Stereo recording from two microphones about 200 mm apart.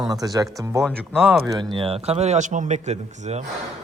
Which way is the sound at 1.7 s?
30° right (ahead or behind).